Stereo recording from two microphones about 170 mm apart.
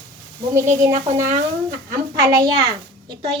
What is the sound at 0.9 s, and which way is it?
Speech, 50° right (ahead or behind).